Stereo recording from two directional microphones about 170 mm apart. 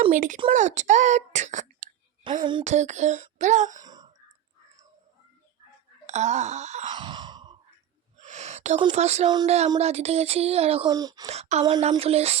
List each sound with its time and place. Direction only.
0.1 s speech: 50° right (ahead or behind)
2.4 s speech: 25° right (ahead or behind)
2.6 s speech: 45° right (ahead or behind)
3.8 s a sound: 25° right (ahead or behind)
6.1 s speech: 40° right (ahead or behind)
6.9 s sigh: 25° right (ahead or behind)
8.2 s gasp: 45° right (ahead or behind)
8.9 s a sound: 40° right (ahead or behind)
10.8 s speech: 20° right (ahead or behind)
11.3 s a sound: 40° right (ahead or behind)